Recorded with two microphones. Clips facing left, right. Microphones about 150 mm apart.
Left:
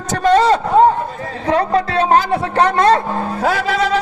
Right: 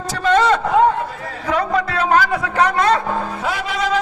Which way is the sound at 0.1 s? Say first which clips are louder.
Left 3 dB; 35° left (ahead or behind).